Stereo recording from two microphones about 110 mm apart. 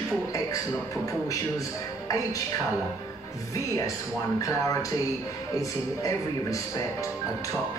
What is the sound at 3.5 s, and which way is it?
Speech, 30° left (ahead or behind).